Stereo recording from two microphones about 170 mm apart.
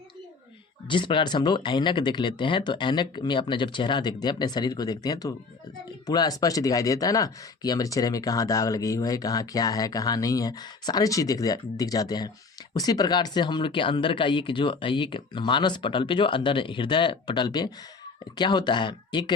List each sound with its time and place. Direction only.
0.9 s speech: 30° left (ahead or behind)